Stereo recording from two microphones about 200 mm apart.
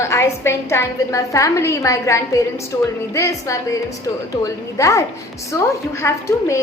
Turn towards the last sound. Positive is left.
turn(degrees=15)  # may be behind; listen again after turning